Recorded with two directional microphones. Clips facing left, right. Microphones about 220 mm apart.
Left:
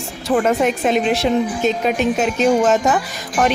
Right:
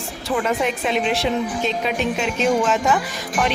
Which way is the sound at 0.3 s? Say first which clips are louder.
Left 5 dB; 45° left (ahead or behind).